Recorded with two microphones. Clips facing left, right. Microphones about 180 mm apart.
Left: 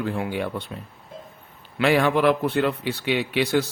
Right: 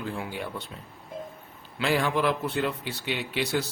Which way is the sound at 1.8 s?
65° left (ahead or behind).